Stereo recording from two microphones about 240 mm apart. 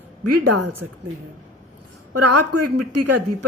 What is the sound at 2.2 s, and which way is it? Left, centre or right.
A woman's voice, right.